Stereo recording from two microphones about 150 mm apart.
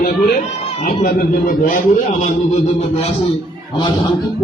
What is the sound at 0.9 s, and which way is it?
Speech, 65° left (ahead or behind).